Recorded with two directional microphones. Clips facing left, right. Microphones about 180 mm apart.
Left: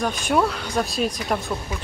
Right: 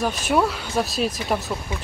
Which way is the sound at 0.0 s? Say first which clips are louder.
Even; 5° right (ahead or behind).